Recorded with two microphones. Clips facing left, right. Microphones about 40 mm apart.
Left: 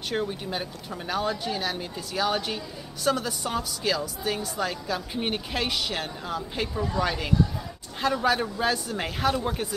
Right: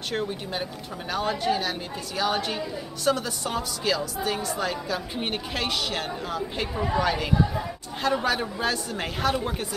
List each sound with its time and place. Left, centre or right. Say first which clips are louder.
0.1 s a woman's voice: left 1 dB; centre
6.7 s speech: right 3 dB; right
7.0 s a woman's voice: right 1 dB; centre